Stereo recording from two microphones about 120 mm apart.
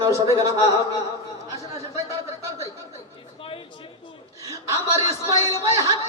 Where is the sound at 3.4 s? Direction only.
45° left (ahead or behind).